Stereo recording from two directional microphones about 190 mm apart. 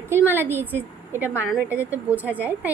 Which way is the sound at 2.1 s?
10° right (ahead or behind).